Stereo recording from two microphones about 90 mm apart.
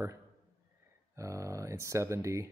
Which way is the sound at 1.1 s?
35° right (ahead or behind).